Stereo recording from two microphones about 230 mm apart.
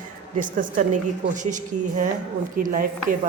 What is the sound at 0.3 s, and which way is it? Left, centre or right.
Speech, right.